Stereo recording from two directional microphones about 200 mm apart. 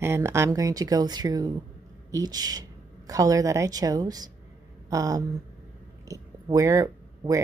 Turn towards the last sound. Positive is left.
turn(degrees=-15)  # may be behind; listen again after turning